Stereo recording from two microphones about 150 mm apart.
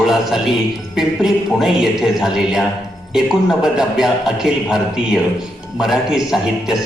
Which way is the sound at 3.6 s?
5° right (ahead or behind).